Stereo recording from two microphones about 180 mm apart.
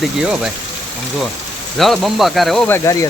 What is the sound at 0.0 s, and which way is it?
Speech, 5° right (ahead or behind).